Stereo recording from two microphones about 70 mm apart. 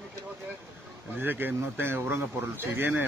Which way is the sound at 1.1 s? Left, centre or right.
Right.